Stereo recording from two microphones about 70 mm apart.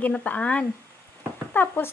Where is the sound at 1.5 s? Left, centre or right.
Left.